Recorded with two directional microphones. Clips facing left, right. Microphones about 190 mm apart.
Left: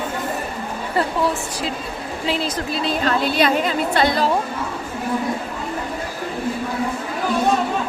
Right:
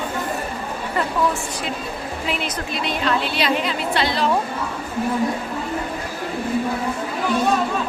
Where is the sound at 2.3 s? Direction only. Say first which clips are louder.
Left 4 dB; 35° left (ahead or behind).